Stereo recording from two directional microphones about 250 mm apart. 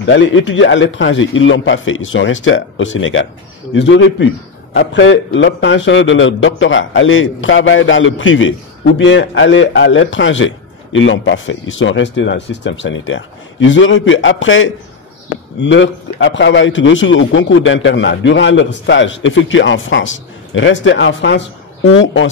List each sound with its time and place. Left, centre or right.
0.0 s a man's voice: left